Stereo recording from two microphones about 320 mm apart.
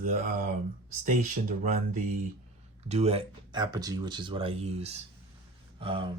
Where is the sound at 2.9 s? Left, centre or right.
Centre.